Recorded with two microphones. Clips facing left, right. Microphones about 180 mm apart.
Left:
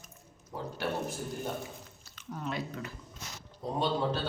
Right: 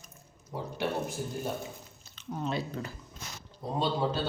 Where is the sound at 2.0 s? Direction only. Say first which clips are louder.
Right 4 dB; 25° right (ahead or behind).